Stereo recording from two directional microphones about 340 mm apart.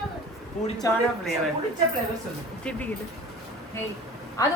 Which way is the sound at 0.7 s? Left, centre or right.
Centre.